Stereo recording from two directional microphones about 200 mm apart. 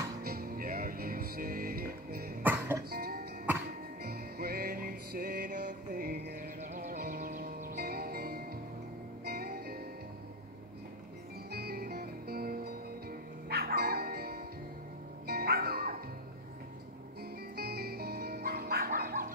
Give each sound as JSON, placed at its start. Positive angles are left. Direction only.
{"t": 0.2, "sound": "music", "side_deg": -50}
{"t": 2.4, "sound": "music", "side_deg": -10}
{"t": 2.9, "sound": "music", "side_deg": -50}
{"t": 11.5, "sound": "music", "side_deg": -50}
{"t": 17.2, "sound": "music", "side_deg": -50}